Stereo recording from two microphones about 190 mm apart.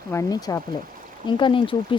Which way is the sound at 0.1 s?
20° left (ahead or behind).